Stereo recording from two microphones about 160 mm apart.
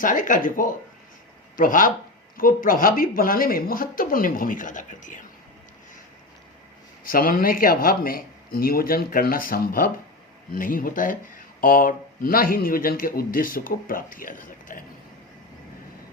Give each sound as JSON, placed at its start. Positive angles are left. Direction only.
{"t": 0.0, "sound": "speech", "side_deg": 55}
{"t": 7.1, "sound": "speech", "side_deg": 65}